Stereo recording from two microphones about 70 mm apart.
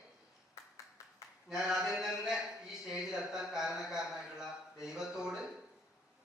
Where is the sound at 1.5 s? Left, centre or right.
Centre.